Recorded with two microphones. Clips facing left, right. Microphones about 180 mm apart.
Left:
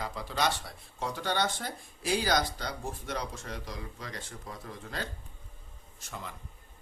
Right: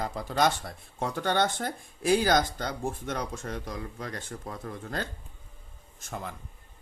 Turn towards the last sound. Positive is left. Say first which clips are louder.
# right 5 dB
turn(degrees=-50)  # may be behind; listen again after turning